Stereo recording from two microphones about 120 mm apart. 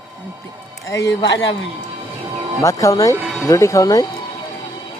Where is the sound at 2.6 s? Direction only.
25° left (ahead or behind).